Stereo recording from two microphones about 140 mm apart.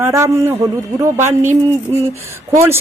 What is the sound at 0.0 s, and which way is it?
Speech, 20° right (ahead or behind).